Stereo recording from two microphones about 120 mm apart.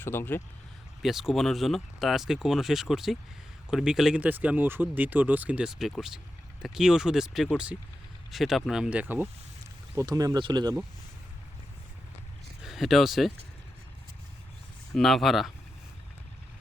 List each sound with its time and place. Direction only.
0.0 s speech: 20° left (ahead or behind)
1.0 s speech: 5° right (ahead or behind)
4.2 s speech: 15° right (ahead or behind)
9.9 s speech: 25° right (ahead or behind)
12.6 s speech: centre (ahead or behind)
14.9 s speech: centre (ahead or behind)